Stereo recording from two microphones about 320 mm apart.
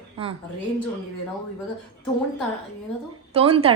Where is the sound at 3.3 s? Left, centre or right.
Centre.